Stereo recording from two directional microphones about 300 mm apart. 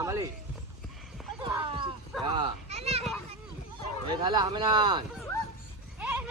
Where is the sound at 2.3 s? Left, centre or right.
Centre.